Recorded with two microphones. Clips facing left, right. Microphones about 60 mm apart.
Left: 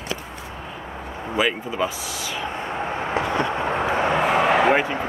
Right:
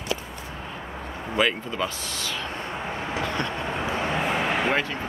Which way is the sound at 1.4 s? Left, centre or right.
Centre.